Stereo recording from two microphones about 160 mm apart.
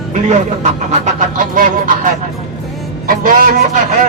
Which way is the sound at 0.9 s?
50° right (ahead or behind).